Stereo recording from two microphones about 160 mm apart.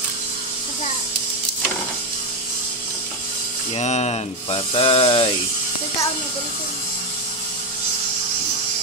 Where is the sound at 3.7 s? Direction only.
45° left (ahead or behind).